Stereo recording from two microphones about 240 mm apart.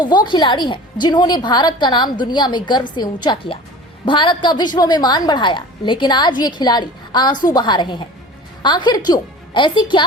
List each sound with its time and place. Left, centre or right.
0.3 s a woman's voice: centre